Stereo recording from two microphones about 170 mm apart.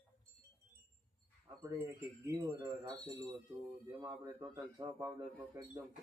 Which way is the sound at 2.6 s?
25° right (ahead or behind).